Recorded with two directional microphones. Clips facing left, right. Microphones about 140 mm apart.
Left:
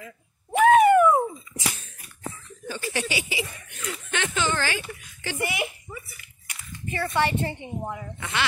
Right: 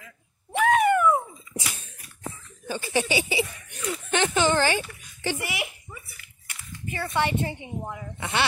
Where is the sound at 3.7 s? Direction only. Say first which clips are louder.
Right 4 dB; 30° right (ahead or behind).